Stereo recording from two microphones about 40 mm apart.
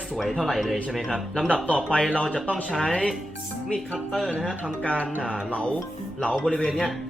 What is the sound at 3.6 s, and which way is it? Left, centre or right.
Speech, centre.